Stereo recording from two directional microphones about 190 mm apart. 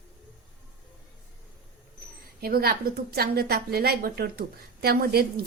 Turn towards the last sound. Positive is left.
turn(degrees=-55)  # may be behind; listen again after turning